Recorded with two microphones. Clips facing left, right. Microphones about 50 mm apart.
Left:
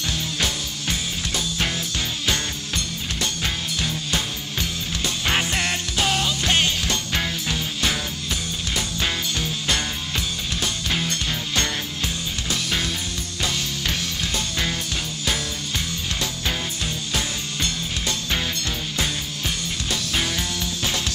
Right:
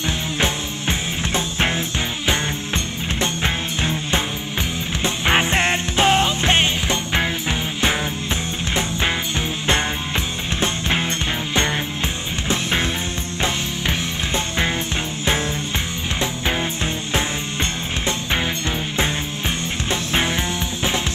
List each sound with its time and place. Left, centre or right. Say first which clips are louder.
0.4 s music: right 4 dB; right
12.4 s music: right 5 dB; right
16.2 s music: right 7 dB; right
19.9 s music: right 5 dB; right